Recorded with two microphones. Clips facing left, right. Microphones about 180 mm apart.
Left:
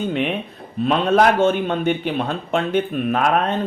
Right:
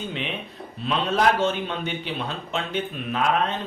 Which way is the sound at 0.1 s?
55° left (ahead or behind).